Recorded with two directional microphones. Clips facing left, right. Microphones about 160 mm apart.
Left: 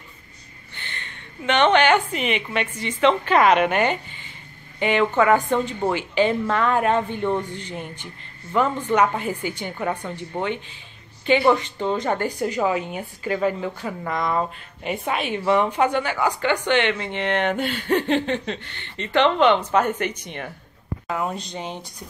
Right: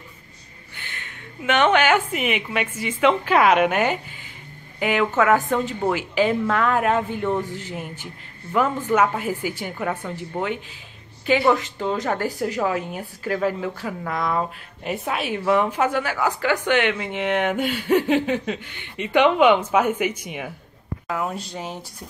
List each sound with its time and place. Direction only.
0.7 s a woman's voice: 5° right (ahead or behind)